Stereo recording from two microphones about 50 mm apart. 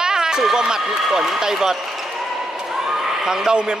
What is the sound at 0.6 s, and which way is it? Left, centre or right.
Speech, centre.